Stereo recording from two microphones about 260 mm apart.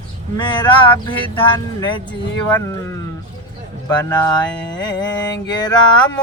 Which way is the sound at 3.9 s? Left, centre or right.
Centre.